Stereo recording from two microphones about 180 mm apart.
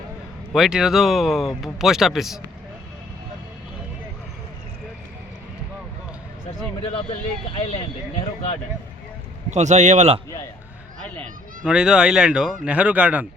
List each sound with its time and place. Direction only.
0.5 s speech: 5° right (ahead or behind)
7.5 s speech: 40° left (ahead or behind)
9.5 s a man's voice: 40° right (ahead or behind)
11.6 s speech: 5° right (ahead or behind)